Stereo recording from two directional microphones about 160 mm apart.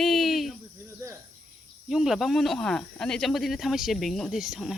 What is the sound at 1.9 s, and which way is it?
Speech, centre (ahead or behind).